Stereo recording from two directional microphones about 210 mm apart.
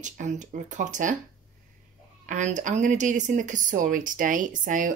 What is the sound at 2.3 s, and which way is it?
Speech, 35° right (ahead or behind).